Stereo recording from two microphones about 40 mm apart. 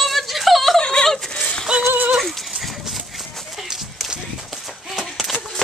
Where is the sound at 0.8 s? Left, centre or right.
Left.